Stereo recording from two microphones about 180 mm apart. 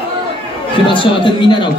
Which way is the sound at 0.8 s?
25° left (ahead or behind).